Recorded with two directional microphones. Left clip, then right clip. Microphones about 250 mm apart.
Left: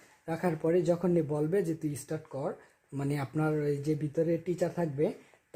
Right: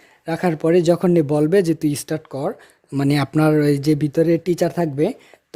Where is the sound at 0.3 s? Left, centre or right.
Right.